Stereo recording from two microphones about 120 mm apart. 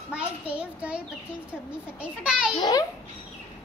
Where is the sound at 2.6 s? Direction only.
35° left (ahead or behind).